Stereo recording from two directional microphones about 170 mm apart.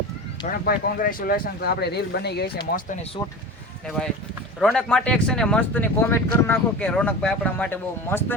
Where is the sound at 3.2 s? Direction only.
20° left (ahead or behind).